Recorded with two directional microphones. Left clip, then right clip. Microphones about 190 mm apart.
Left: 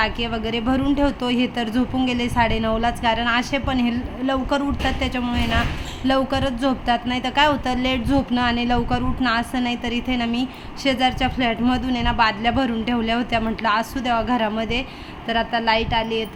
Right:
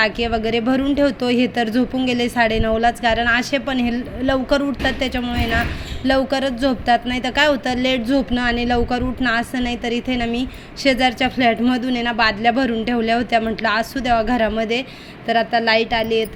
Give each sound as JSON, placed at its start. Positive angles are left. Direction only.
{"t": 0.0, "sound": "a woman's voice", "side_deg": -15}